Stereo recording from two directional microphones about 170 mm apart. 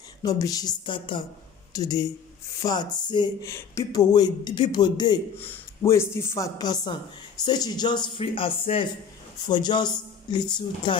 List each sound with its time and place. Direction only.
0.2 s a man's voice: 20° left (ahead or behind)